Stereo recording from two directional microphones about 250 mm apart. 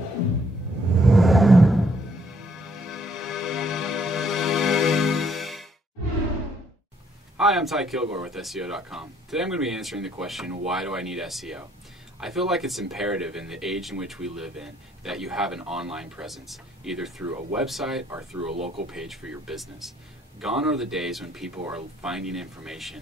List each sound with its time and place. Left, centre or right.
1.0 s a sound: centre
2.6 s music: centre
7.3 s speech: centre
18.5 s speech: right
18.9 s speech: centre